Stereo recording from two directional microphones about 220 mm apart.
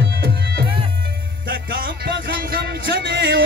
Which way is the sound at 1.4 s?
40° right (ahead or behind).